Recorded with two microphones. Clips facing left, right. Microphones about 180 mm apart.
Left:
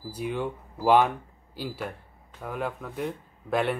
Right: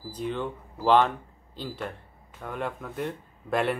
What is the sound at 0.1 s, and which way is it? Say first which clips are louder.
Speech: left 1 dB; 10° left (ahead or behind).